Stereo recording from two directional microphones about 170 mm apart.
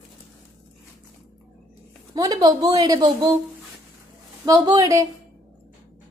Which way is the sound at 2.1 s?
20° right (ahead or behind).